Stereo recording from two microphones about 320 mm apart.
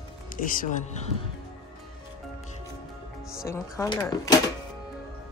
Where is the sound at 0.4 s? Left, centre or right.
Left.